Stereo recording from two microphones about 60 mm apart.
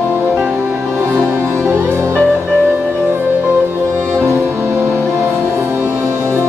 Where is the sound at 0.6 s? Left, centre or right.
Right.